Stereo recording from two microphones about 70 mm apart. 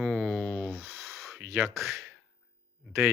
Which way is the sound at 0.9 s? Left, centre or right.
Centre.